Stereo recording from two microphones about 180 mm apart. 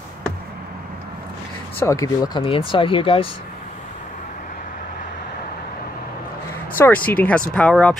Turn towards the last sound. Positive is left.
turn(degrees=5)  # may be behind; listen again after turning